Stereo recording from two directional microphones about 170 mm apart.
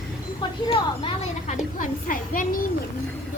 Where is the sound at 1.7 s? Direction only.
55° left (ahead or behind).